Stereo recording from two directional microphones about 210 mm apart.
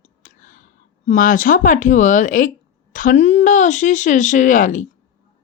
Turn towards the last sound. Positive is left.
turn(degrees=40)  # may be behind; listen again after turning